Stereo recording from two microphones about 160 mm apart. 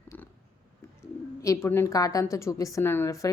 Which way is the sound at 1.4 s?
15° left (ahead or behind).